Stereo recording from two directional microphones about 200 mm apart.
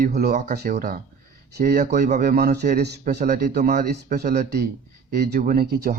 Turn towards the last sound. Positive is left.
turn(degrees=-50)  # may be behind; listen again after turning